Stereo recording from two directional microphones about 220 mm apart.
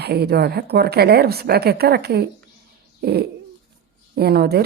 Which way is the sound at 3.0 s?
45° right (ahead or behind).